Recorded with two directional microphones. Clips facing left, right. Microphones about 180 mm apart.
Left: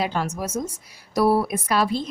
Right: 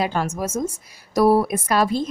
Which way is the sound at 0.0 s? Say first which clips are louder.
Right 2 dB; 50° right (ahead or behind).